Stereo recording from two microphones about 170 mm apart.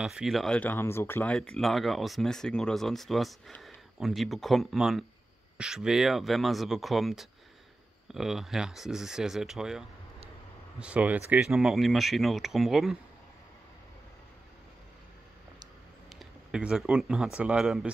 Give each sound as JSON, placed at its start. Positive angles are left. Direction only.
{"t": 0.0, "sound": "speech", "side_deg": -5}
{"t": 16.2, "sound": "speech", "side_deg": -5}